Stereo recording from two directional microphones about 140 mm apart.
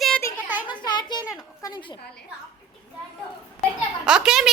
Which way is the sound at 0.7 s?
30° left (ahead or behind).